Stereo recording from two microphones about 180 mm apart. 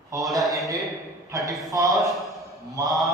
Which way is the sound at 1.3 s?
20° right (ahead or behind).